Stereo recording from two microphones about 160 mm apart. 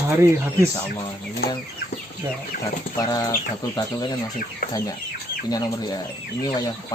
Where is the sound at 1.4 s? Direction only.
80° left.